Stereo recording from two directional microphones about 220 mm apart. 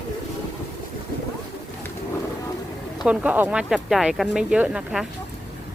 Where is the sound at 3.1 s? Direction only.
5° right (ahead or behind).